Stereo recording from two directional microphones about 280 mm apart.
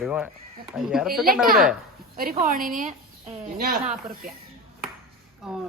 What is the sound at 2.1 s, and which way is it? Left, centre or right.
A woman's voice, right.